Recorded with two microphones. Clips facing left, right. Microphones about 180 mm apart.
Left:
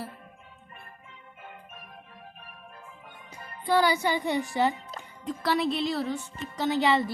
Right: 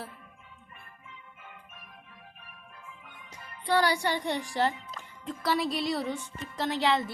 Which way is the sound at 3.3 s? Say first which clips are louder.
Left 4 dB; 45° left (ahead or behind).